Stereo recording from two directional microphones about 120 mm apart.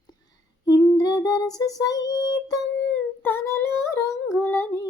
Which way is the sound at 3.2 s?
20° left (ahead or behind).